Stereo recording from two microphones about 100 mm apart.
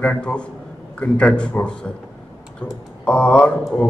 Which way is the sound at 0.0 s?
10° left (ahead or behind).